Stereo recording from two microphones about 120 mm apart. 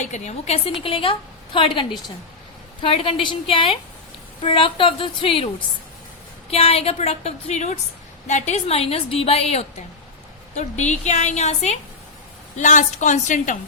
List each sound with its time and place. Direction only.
0.0 s a woman's voice: 70° left (ahead or behind)
10.5 s a woman's voice: 75° left (ahead or behind)
12.5 s a woman's voice: 85° left